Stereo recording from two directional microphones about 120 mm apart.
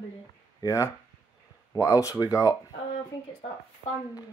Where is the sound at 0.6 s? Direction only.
30° left (ahead or behind).